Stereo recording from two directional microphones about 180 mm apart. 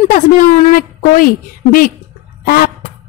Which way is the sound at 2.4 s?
55° left (ahead or behind).